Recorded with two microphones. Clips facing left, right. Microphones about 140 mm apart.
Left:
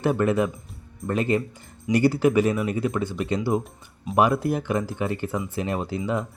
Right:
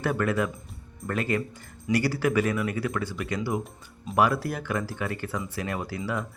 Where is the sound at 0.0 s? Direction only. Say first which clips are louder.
Left 4 dB; 25° left (ahead or behind).